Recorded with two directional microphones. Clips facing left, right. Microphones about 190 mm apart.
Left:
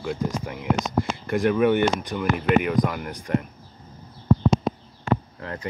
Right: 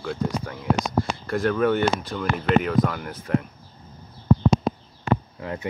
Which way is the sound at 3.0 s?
Centre (ahead or behind).